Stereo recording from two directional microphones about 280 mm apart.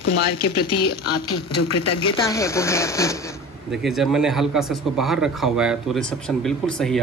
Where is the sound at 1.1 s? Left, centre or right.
Left.